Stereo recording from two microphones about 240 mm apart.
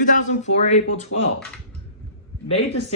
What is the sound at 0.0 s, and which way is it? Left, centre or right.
Speech, left.